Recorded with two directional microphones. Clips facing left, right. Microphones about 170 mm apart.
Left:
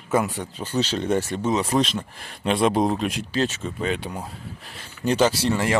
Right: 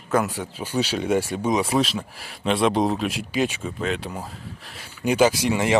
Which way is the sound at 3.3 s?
10° right (ahead or behind).